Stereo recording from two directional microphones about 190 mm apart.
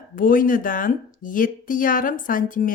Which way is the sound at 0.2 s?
45° left (ahead or behind).